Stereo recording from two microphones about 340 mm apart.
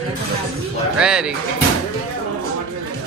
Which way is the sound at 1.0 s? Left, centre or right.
Centre.